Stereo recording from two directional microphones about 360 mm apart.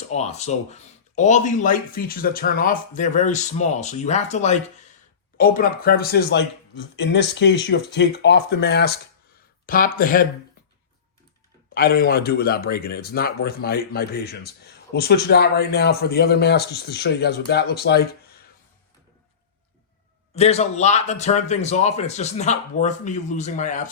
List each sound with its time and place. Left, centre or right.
0.1 s a man's voice: centre
11.7 s a man's voice: left
20.3 s a man's voice: centre